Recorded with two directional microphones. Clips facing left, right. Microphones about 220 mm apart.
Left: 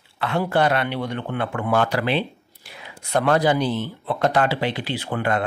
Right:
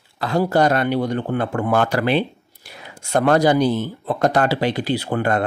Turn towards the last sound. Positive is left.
turn(degrees=-45)  # may be behind; listen again after turning